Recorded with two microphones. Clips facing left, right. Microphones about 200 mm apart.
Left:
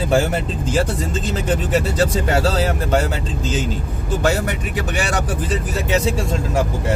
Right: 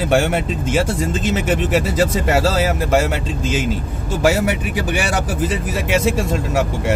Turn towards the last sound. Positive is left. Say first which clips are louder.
# right 2 dB
turn(degrees=-5)  # may be behind; listen again after turning